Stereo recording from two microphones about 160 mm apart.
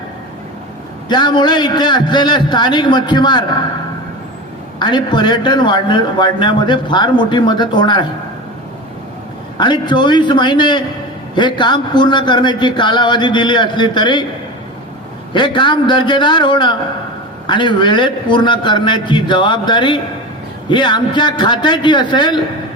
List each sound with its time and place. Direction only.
1.0 s a man's voice: 30° left (ahead or behind)
4.8 s a man's voice: 30° left (ahead or behind)
9.6 s a man's voice: 30° left (ahead or behind)
15.3 s a man's voice: 30° left (ahead or behind)